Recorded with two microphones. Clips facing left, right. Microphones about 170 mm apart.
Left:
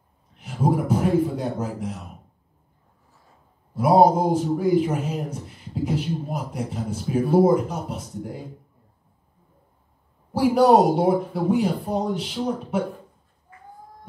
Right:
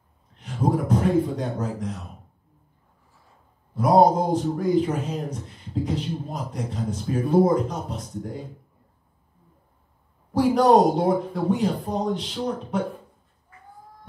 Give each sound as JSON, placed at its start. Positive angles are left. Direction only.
{"t": 0.4, "sound": "a man's voice", "side_deg": 10}
{"t": 3.7, "sound": "a man's voice", "side_deg": 10}
{"t": 10.3, "sound": "a man's voice", "side_deg": 10}